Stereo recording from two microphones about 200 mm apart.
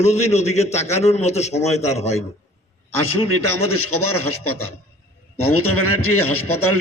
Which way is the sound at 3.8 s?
90° left.